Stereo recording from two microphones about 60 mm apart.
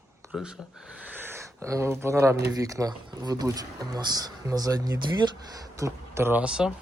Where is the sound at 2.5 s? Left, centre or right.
Right.